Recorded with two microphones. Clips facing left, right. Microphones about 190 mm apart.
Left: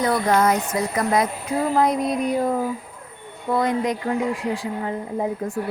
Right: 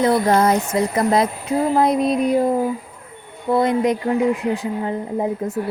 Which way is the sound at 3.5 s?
25° right (ahead or behind).